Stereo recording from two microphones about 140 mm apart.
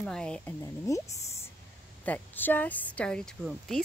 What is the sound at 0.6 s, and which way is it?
A woman's voice, 20° left (ahead or behind).